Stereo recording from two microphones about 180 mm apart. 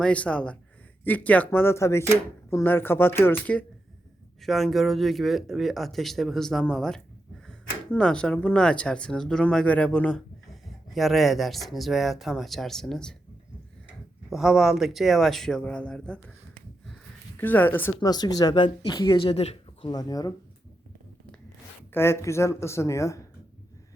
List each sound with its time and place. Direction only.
0.0 s speech: 5° left (ahead or behind)
14.3 s speech: centre (ahead or behind)
17.3 s speech: 10° left (ahead or behind)
17.9 s speech: 20° left (ahead or behind)
21.9 s speech: 15° left (ahead or behind)